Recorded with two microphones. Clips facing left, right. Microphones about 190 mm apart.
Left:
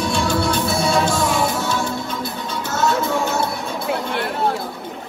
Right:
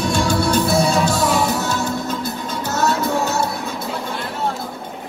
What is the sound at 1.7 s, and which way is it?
Music, 40° right (ahead or behind).